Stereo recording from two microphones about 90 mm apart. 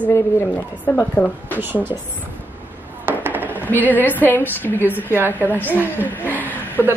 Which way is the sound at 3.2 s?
20° right (ahead or behind).